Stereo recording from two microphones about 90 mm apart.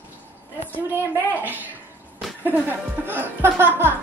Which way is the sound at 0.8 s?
20° right (ahead or behind).